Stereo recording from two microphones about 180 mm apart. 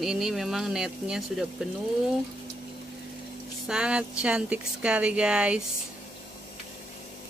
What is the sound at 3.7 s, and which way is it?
Speech, 5° right (ahead or behind).